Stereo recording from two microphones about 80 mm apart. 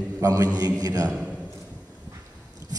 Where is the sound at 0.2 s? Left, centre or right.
Right.